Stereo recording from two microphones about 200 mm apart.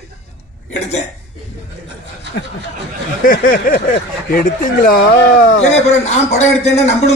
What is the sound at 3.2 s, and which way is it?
A man's voice, 45° left (ahead or behind).